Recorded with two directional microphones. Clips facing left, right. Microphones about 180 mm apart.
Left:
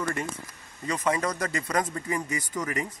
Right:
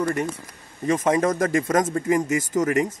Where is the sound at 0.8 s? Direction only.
45° right (ahead or behind).